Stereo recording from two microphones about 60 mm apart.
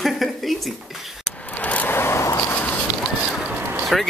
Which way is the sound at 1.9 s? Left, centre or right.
Left.